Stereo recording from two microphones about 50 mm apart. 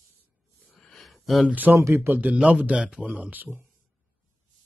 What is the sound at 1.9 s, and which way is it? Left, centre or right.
Speech, right.